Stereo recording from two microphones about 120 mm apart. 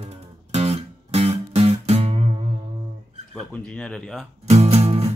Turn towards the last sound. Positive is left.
turn(degrees=-60)  # may be behind; listen again after turning